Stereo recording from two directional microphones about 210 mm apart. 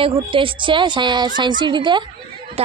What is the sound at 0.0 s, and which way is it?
A woman's voice, 25° right (ahead or behind).